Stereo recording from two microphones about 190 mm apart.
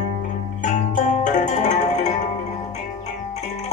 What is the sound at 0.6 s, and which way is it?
Music, 40° left (ahead or behind).